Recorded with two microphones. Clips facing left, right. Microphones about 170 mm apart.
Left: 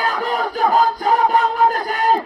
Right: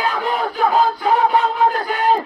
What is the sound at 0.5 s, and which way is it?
Crowd, 40° left (ahead or behind).